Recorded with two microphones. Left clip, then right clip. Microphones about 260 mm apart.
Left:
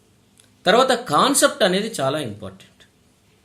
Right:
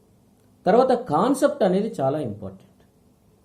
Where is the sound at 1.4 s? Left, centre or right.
Centre.